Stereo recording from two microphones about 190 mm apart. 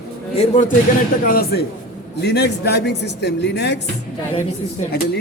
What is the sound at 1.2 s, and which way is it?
Speech, 50° left (ahead or behind).